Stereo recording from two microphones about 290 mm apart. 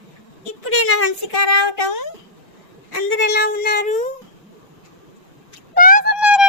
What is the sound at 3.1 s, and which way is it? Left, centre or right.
Cat, left.